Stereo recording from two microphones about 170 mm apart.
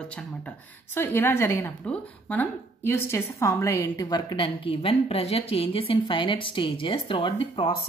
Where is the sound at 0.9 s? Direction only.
15° left (ahead or behind).